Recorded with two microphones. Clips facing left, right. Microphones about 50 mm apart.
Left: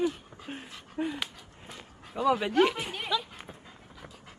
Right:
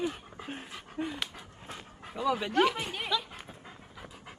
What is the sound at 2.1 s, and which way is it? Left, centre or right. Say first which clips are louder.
Speech: left 4 dB; centre.